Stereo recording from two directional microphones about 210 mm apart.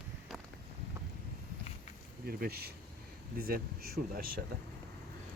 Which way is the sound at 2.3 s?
50° right (ahead or behind).